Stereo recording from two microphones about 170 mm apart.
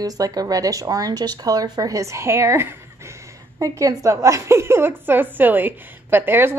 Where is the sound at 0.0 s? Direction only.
20° right (ahead or behind).